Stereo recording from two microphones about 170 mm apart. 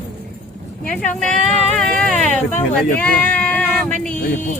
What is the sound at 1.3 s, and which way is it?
Speech, 40° right (ahead or behind).